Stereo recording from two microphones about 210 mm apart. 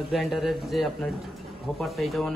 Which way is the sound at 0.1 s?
Centre (ahead or behind).